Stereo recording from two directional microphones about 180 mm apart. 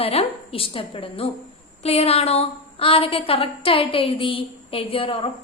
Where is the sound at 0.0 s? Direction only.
35° left (ahead or behind).